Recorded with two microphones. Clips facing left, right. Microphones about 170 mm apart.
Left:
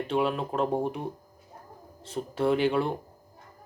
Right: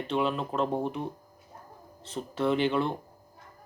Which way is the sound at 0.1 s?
10° left (ahead or behind).